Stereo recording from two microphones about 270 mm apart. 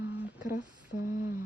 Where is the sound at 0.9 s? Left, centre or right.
Left.